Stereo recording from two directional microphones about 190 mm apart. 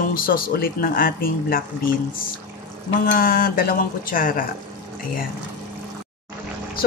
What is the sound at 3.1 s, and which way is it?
Speech, 50° left (ahead or behind).